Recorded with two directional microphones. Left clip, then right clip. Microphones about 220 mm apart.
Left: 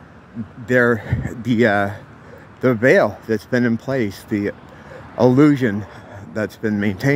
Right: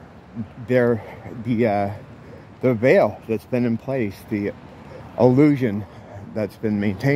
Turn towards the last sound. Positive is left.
turn(degrees=10)  # may be behind; listen again after turning